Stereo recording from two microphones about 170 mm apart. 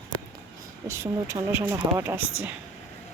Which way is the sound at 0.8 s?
15° right (ahead or behind).